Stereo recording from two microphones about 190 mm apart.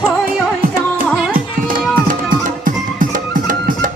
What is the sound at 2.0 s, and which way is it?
Music, 45° right (ahead or behind).